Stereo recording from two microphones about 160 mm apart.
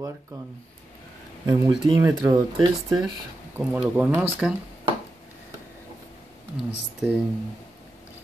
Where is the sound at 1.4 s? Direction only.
25° right (ahead or behind).